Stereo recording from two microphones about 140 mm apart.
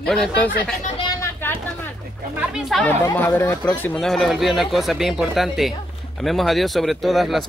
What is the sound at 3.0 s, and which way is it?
Speech, 15° left (ahead or behind).